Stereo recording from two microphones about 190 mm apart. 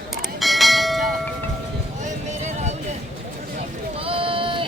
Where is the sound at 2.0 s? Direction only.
40° right (ahead or behind).